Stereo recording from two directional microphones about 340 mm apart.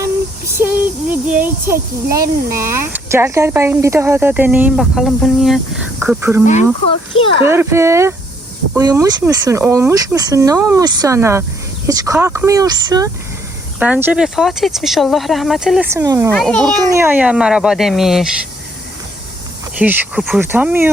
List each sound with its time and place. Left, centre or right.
0.0 s a sound: centre
1.6 s speech: centre
6.4 s speech: left
7.4 s speech: centre
16.3 s speech: centre
19.8 s speech: centre